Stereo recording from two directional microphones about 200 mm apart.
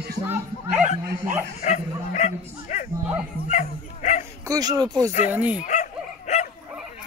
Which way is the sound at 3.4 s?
35° left (ahead or behind).